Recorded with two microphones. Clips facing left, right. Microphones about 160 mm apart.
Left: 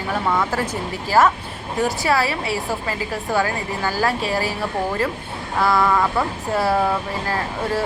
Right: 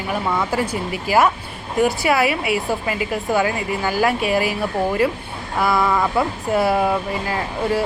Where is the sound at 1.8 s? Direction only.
15° right (ahead or behind).